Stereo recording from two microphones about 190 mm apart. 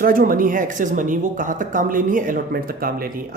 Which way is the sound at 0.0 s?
50° right (ahead or behind).